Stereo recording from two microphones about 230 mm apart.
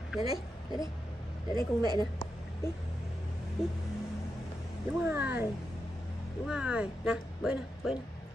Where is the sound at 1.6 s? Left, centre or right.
Centre.